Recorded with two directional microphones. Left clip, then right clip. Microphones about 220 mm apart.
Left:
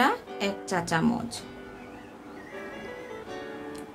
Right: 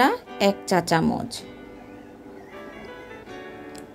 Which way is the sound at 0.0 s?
25° right (ahead or behind).